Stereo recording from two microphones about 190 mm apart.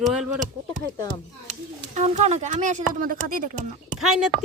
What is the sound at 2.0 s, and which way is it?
Speech, 35° right (ahead or behind).